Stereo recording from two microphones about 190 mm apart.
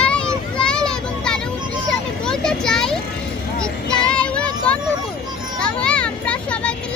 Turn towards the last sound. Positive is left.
turn(degrees=5)  # may be behind; listen again after turning